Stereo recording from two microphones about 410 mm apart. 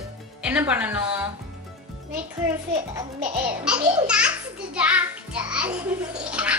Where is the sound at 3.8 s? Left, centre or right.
Centre.